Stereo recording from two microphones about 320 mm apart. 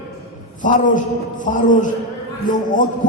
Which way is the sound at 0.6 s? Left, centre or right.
Left.